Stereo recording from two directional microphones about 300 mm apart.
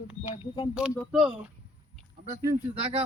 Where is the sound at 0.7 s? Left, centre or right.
Centre.